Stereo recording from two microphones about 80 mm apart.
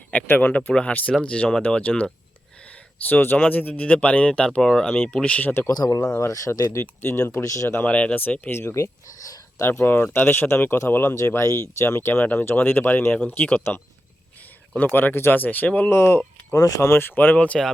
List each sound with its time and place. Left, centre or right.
0.1 s speech: centre
3.0 s speech: left
5.7 s speech: left
6.1 s speech: left
7.0 s speech: left
7.4 s speech: left
7.8 s speech: centre
15.9 s speech: left
16.6 s speech: left
16.8 s speech: left
17.3 s speech: centre